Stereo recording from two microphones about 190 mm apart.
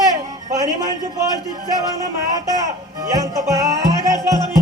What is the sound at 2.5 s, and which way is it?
Music, 20° right (ahead or behind).